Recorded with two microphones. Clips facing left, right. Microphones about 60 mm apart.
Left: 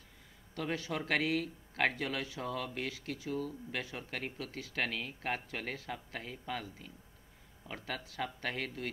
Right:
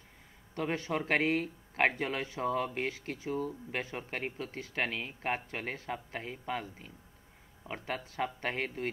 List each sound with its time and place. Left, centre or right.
0.6 s speech: right